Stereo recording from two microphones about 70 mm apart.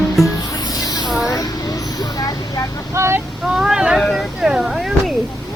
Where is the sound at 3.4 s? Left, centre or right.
Centre.